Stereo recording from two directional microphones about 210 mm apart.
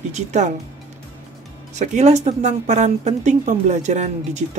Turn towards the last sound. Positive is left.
turn(degrees=-35)  # may be behind; listen again after turning